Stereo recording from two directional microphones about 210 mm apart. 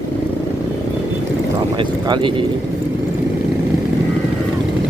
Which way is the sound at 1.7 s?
25° right (ahead or behind).